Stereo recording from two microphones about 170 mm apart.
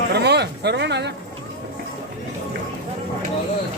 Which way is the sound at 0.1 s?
80° right.